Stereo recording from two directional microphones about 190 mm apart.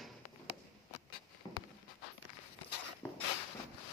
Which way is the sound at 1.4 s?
20° left (ahead or behind).